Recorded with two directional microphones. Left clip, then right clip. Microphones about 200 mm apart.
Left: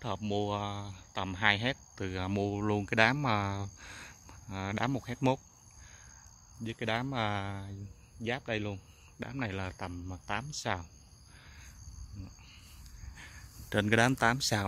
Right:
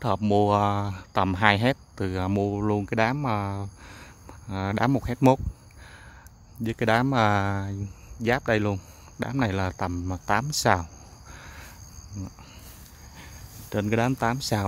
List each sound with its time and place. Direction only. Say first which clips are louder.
0.0 s speech: right 12 dB; 25° right (ahead or behind)
6.6 s speech: right 11 dB; 20° right (ahead or behind)
11.3 s a sound: right 11 dB; 30° right (ahead or behind)
13.7 s speech: right 2 dB; centre (ahead or behind)